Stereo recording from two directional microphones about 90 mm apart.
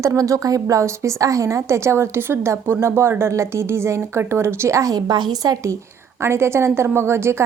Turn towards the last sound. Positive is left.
turn(degrees=-30)  # may be behind; listen again after turning